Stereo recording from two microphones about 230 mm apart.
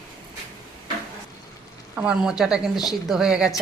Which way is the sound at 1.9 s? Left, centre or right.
Centre.